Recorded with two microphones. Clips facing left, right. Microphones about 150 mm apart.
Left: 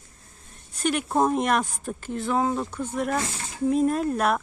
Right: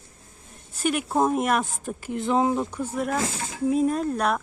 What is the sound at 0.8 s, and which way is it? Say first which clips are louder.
A woman's voice: even; 5° right (ahead or behind).